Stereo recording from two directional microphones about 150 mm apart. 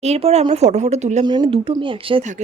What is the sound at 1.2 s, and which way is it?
Speech, 35° right (ahead or behind).